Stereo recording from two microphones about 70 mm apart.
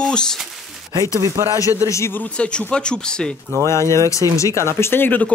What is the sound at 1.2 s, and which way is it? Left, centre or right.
Speech, right.